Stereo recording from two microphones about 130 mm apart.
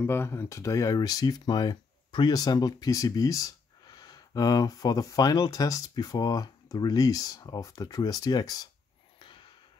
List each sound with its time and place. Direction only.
0.0 s speech: 20° left (ahead or behind)